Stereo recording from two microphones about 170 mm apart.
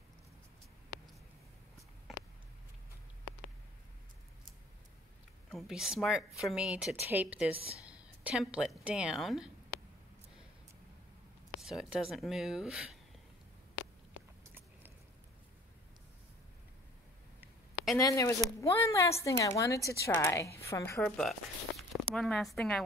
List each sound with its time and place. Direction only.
5.5 s a woman's voice: centre (ahead or behind)
7.5 s speech: 35° right (ahead or behind)
8.2 s a woman's voice: 5° right (ahead or behind)
11.6 s a woman's voice: centre (ahead or behind)
17.9 s a woman's voice: 20° left (ahead or behind)
21.0 s a woman's voice: centre (ahead or behind)